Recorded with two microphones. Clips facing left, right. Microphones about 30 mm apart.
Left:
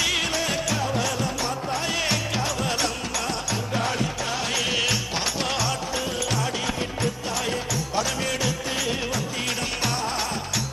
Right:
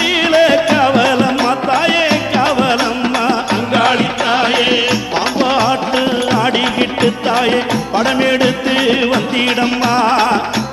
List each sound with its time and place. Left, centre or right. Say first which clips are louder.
0.0 s music: right 13 dB; right
0.8 s music: right 14 dB; right
2.0 s music: right 12 dB; right
3.7 s music: right 14 dB; right
4.4 s music: right 11 dB; right
5.9 s music: right 13 dB; right
7.9 s music: right 13 dB; right